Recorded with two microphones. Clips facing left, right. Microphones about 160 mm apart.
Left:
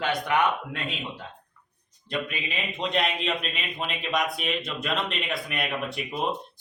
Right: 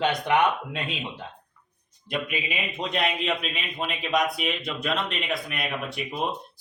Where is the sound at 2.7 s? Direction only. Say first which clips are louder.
Left 1 dB; centre (ahead or behind).